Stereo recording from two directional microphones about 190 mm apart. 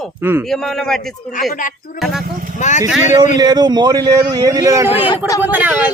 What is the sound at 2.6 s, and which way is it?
Speech, 40° left (ahead or behind).